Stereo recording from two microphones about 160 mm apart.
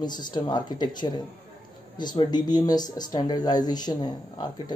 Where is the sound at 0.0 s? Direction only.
25° left (ahead or behind).